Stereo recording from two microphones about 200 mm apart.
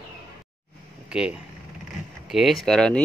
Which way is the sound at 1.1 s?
5° right (ahead or behind).